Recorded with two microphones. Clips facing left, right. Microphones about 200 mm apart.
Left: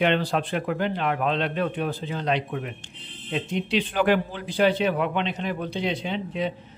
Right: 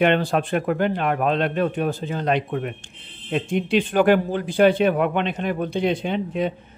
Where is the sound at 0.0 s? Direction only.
50° right (ahead or behind).